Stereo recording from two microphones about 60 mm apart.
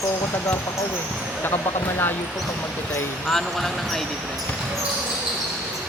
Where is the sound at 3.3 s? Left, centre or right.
Centre.